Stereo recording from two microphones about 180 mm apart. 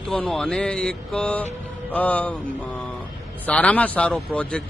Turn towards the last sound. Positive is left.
turn(degrees=5)  # may be behind; listen again after turning